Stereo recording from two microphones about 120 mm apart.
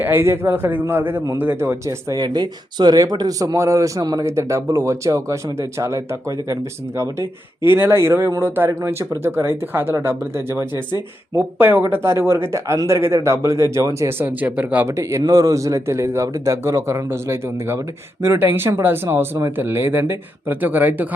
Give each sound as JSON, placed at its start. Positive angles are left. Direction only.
{"t": 0.0, "sound": "a man's voice", "side_deg": -20}
{"t": 2.2, "sound": "a man's voice", "side_deg": -40}
{"t": 14.9, "sound": "a man's voice", "side_deg": -25}